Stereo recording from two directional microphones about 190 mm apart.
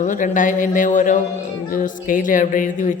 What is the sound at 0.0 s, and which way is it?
Speech, 40° left (ahead or behind).